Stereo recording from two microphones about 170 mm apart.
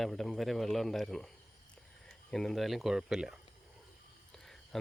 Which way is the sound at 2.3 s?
Centre (ahead or behind).